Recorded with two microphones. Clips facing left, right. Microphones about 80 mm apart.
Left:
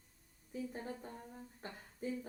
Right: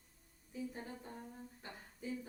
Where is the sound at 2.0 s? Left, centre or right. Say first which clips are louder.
Left 3 dB; left.